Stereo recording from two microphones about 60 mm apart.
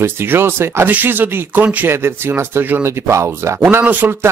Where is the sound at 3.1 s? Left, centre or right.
Right.